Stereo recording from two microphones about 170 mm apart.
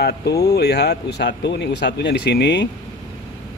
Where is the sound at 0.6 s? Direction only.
75° left (ahead or behind).